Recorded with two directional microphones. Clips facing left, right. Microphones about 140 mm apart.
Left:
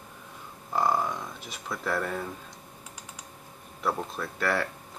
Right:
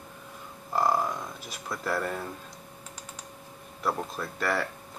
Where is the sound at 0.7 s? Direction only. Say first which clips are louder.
Even; 5° right (ahead or behind).